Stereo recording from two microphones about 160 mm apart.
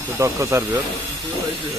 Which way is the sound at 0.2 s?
20° right (ahead or behind).